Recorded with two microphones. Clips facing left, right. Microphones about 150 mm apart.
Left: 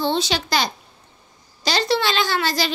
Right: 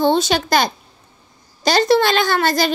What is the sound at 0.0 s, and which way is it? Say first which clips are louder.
A child's voice: right 6 dB; 50° right (ahead or behind).